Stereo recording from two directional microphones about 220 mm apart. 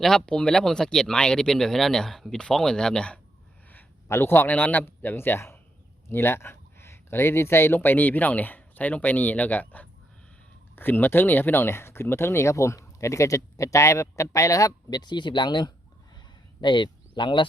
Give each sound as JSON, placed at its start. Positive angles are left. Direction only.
{"t": 0.0, "sound": "a man's voice", "side_deg": 0}